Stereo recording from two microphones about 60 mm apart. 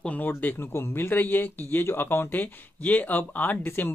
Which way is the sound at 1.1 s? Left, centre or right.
Left.